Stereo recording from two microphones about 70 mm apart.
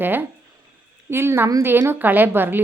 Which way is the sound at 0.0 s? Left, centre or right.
Right.